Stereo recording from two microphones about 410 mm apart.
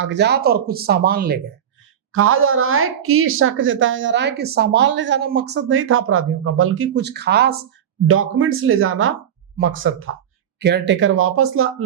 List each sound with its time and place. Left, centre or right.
0.0 s a woman's voice: right